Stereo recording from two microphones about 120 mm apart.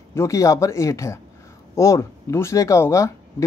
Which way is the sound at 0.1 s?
25° left (ahead or behind).